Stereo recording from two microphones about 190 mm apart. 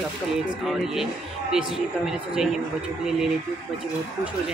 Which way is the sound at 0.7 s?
Centre (ahead or behind).